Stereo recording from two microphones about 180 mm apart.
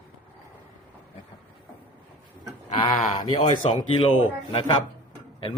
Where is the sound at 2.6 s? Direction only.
35° left (ahead or behind).